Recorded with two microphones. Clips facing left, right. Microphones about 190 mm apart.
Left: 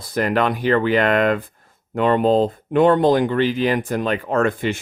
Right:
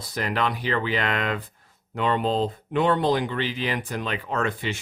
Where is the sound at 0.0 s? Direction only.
50° left (ahead or behind).